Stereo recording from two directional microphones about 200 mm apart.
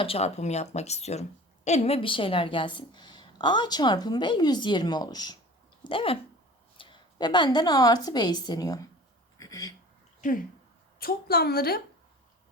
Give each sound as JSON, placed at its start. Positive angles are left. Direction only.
{"t": 0.0, "sound": "a woman's voice", "side_deg": 30}
{"t": 9.4, "sound": "a sound", "side_deg": 15}
{"t": 10.2, "sound": "a woman's voice", "side_deg": 40}